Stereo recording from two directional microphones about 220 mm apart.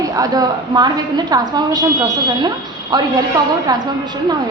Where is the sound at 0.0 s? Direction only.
15° right (ahead or behind).